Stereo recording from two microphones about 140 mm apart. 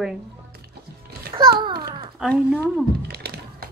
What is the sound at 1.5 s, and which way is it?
Speech, 35° right (ahead or behind).